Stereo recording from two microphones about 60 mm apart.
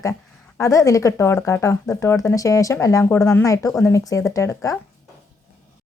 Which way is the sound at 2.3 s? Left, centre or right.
Left.